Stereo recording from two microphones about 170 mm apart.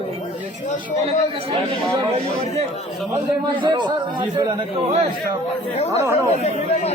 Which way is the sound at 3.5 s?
25° right (ahead or behind).